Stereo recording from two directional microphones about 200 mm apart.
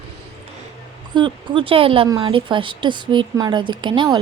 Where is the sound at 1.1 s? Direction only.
25° right (ahead or behind).